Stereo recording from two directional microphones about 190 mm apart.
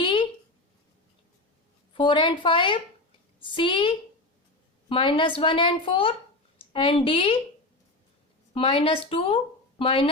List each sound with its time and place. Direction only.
0.0 s a sound: 25° left (ahead or behind)
1.9 s a woman's voice: 25° left (ahead or behind)
8.5 s speech: 30° left (ahead or behind)